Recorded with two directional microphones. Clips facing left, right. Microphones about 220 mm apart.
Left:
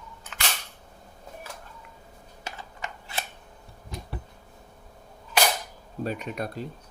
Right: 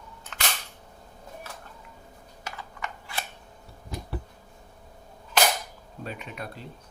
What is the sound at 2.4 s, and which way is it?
Typing, 25° left (ahead or behind).